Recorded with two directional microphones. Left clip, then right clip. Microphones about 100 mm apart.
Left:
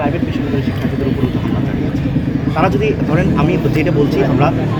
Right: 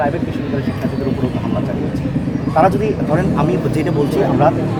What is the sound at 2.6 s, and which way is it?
Speech, 20° right (ahead or behind).